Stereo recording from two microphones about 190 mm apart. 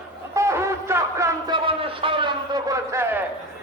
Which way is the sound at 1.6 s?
25° right (ahead or behind).